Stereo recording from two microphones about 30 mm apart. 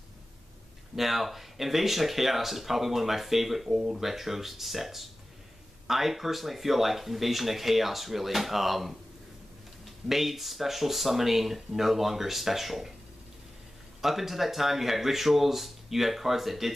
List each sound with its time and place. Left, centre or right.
0.9 s speech: centre
3.7 s speech: centre
4.0 s speech: centre
10.0 s speech: centre
14.0 s speech: centre